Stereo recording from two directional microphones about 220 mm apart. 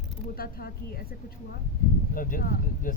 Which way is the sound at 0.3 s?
45° left (ahead or behind).